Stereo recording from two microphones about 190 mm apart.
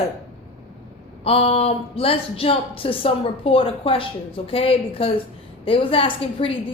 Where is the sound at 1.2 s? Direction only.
30° left (ahead or behind).